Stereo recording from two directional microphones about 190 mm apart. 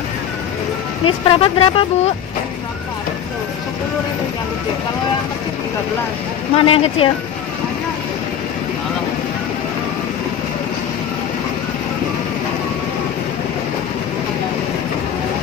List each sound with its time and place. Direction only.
1.0 s speech: 30° left (ahead or behind)
6.5 s speech: 30° left (ahead or behind)